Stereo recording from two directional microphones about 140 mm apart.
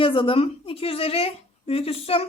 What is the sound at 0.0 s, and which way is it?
A woman's voice, 40° left (ahead or behind).